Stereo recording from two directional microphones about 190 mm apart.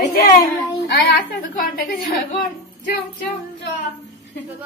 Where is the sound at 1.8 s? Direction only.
50° left (ahead or behind).